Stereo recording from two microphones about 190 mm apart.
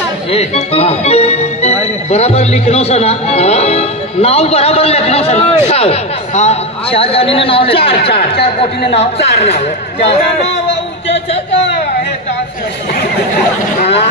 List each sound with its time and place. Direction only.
0.3 s speech: 30° left (ahead or behind)
8.1 s speech: 55° left (ahead or behind)
8.5 s speech: 35° left (ahead or behind)